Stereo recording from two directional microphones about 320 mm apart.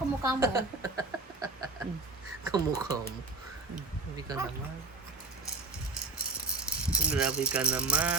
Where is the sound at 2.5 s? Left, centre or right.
Centre.